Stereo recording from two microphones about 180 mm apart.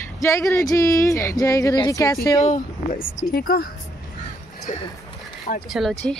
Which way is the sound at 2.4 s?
45° left (ahead or behind).